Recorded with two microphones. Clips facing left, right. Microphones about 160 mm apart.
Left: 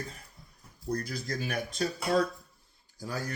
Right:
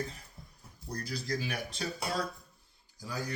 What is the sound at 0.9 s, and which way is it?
Speech, 50° left (ahead or behind).